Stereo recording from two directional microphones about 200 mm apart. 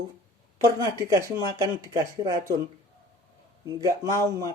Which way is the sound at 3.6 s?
15° right (ahead or behind).